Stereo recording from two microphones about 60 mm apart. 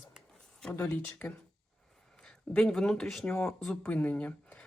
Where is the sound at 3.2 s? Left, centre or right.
Left.